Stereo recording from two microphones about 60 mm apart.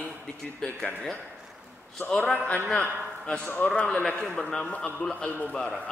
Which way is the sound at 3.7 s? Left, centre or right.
Centre.